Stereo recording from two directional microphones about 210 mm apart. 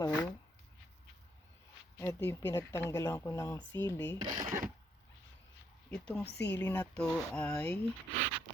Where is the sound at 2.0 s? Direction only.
10° left (ahead or behind).